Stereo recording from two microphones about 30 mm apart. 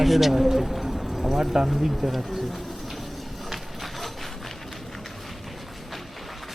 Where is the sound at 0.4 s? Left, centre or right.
Centre.